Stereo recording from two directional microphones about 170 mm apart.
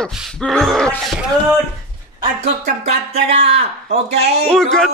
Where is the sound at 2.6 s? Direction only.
40° right (ahead or behind).